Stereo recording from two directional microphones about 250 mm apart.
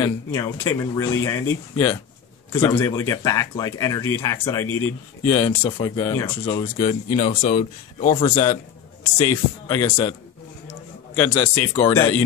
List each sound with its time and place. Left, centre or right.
0.0 s speech: centre
7.2 s speech: left
9.7 s speech: centre
11.1 s speech: centre
11.9 s speech: centre